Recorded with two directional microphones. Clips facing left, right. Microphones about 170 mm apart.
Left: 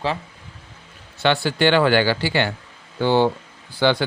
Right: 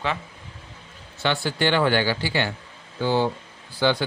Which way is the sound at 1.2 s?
75° left (ahead or behind).